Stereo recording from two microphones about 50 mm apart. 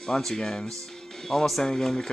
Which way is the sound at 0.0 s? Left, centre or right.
Centre.